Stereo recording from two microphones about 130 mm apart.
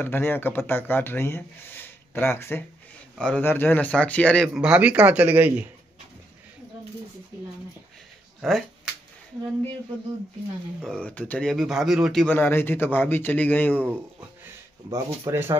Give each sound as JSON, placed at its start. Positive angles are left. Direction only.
{"t": 0.0, "sound": "speech", "side_deg": 15}
{"t": 4.6, "sound": "speech", "side_deg": -10}
{"t": 8.4, "sound": "speech", "side_deg": 0}
{"t": 10.8, "sound": "speech", "side_deg": 5}
{"t": 12.3, "sound": "speech", "side_deg": 15}
{"t": 15.2, "sound": "speech", "side_deg": -15}